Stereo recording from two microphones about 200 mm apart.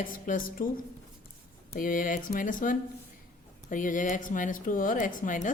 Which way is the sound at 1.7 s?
45° left (ahead or behind).